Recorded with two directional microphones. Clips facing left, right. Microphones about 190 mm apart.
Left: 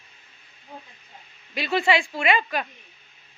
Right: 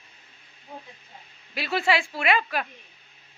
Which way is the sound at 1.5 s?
5° right (ahead or behind).